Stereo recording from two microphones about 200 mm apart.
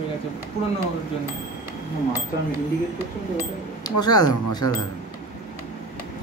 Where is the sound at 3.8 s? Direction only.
20° left (ahead or behind).